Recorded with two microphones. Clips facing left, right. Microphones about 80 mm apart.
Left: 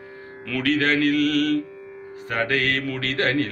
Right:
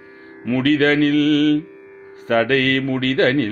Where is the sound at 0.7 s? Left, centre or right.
Right.